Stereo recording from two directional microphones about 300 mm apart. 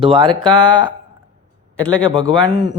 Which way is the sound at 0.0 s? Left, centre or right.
Centre.